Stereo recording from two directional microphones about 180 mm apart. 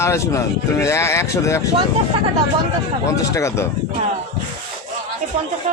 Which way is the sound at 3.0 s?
15° left (ahead or behind).